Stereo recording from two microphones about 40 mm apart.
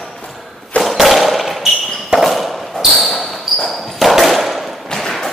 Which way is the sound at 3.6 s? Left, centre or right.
Centre.